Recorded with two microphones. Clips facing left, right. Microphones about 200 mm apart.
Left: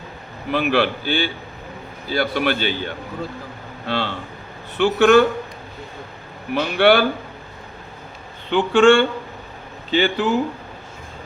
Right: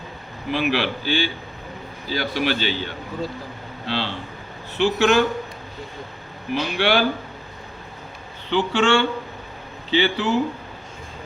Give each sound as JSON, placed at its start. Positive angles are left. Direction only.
{"t": 0.5, "sound": "a man's voice", "side_deg": 55}
{"t": 6.5, "sound": "speech", "side_deg": 55}
{"t": 8.4, "sound": "a man's voice", "side_deg": 50}